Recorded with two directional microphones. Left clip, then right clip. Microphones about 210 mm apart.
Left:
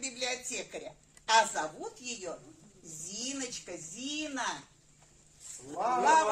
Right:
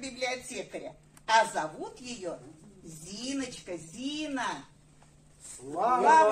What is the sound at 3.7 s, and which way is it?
Speech, 25° left (ahead or behind).